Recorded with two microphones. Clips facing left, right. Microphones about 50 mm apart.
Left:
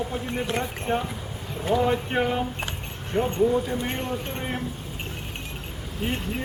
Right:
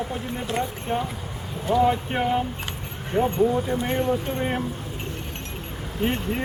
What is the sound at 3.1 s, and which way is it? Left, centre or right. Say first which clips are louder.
Speech: right 3 dB; centre.